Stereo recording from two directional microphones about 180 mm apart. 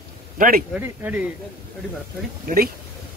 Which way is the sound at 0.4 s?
50° right (ahead or behind).